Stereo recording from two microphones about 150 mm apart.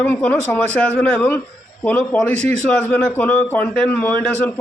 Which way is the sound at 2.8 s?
10° left (ahead or behind).